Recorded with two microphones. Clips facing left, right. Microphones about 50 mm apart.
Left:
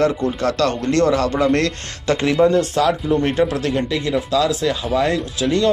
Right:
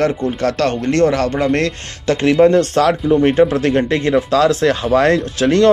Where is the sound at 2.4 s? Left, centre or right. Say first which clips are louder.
Right 3 dB; right.